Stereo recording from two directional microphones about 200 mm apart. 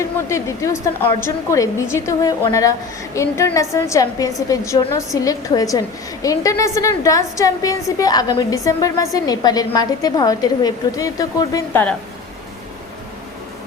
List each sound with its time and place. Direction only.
0.3 s a woman's voice: 15° left (ahead or behind)